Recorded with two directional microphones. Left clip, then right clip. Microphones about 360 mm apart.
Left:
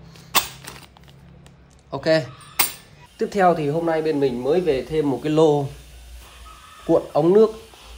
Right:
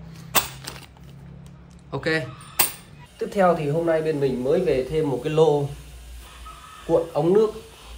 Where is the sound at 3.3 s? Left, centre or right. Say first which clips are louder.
Left 2 dB; left.